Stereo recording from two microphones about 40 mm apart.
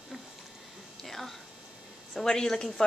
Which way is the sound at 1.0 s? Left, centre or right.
Centre.